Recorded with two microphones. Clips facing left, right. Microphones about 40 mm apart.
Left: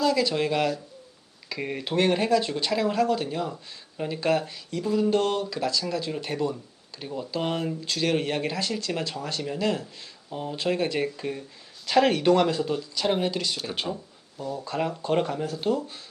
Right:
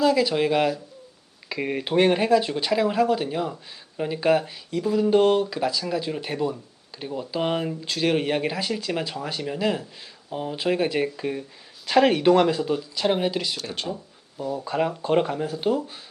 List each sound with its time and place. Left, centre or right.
0.0 s speech: centre
13.6 s speech: centre
14.3 s speech: centre